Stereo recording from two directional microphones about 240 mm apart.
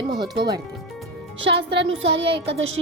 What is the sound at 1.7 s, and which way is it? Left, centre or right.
Child singing, right.